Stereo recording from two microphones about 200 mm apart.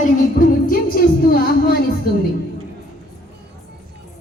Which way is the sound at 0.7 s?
45° left (ahead or behind).